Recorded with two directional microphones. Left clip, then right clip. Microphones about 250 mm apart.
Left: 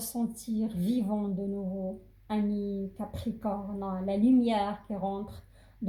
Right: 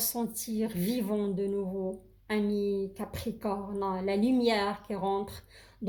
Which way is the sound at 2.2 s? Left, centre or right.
Right.